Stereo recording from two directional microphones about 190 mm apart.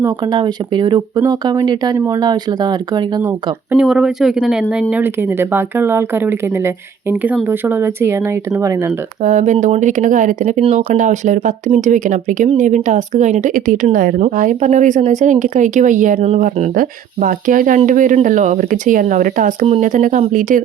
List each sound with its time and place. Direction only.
0.0 s speech: 20° right (ahead or behind)
7.4 s speech: 10° right (ahead or behind)
9.2 s speech: 40° right (ahead or behind)